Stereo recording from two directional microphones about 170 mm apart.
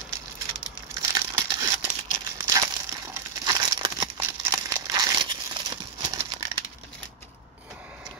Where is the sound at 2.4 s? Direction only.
20° right (ahead or behind).